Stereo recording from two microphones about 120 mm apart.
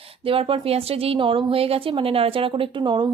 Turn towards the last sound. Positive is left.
turn(degrees=-40)  # may be behind; listen again after turning